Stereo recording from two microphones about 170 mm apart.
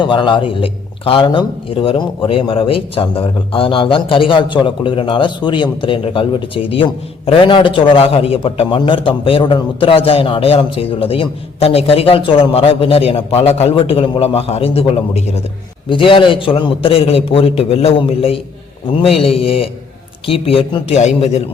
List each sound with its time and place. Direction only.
0.0 s a man's voice: 30° left (ahead or behind)